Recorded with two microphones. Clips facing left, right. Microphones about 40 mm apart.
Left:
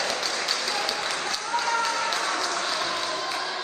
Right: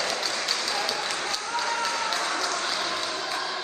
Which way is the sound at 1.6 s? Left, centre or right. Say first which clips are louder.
Left 2 dB; left.